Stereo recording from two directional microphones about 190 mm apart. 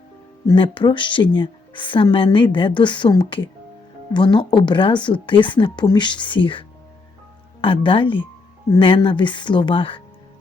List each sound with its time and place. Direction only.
0.4 s a woman's voice: 25° left (ahead or behind)